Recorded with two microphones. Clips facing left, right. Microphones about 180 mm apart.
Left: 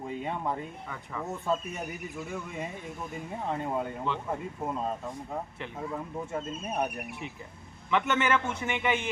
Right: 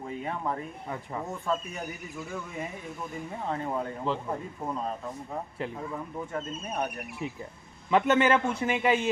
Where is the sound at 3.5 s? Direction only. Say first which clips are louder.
Even; 10° left (ahead or behind).